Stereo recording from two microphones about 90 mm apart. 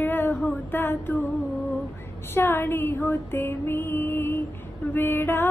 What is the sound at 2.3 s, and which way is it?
Female singing, 25° left (ahead or behind).